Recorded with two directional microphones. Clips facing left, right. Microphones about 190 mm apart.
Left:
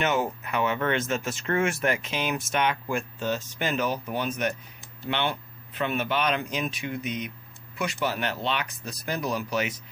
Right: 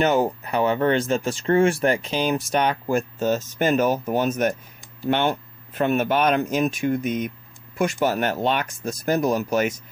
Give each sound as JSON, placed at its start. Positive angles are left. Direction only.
{"t": 0.0, "sound": "speech", "side_deg": -35}